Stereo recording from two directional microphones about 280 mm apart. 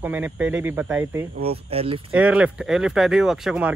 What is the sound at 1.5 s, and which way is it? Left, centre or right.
Speech, right.